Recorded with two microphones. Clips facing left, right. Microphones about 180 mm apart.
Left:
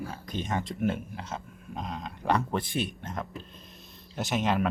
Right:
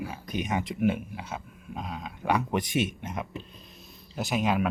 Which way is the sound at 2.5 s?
15° right (ahead or behind).